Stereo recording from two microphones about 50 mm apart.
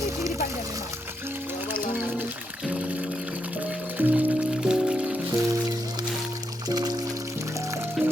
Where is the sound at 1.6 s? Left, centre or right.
Right.